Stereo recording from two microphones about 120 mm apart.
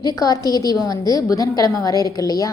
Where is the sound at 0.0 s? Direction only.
30° left (ahead or behind).